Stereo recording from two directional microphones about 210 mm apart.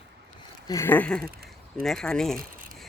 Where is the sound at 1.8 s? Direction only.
Centre (ahead or behind).